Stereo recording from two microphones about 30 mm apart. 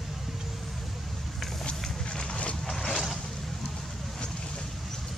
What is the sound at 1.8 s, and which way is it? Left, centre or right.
Walk, left.